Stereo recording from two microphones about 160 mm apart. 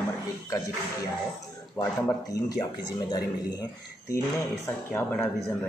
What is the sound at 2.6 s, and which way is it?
Speech, 25° left (ahead or behind).